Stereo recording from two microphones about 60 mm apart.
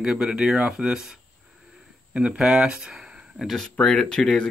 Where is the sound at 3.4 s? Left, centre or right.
Centre.